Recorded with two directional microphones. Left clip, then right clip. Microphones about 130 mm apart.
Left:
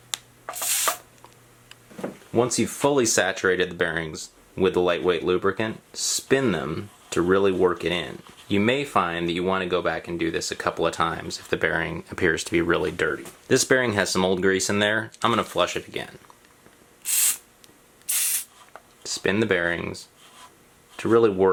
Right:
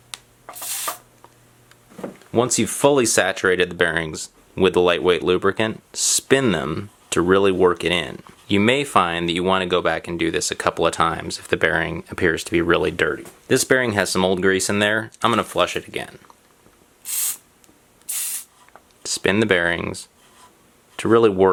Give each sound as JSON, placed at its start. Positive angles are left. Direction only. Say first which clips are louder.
{"t": 0.1, "sound": "rub", "louder": "left 4 dB", "side_deg": 0}
{"t": 2.3, "sound": "speech", "louder": "right 3 dB", "side_deg": -45}
{"t": 17.0, "sound": "spray", "louder": "left 3 dB", "side_deg": 0}
{"t": 19.0, "sound": "speech", "louder": "right 4 dB", "side_deg": -40}